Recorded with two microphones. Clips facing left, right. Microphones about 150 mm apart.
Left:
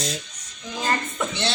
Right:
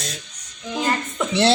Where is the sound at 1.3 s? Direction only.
70° right (ahead or behind).